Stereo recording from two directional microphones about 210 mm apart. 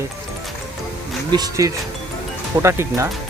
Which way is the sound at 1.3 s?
15° right (ahead or behind).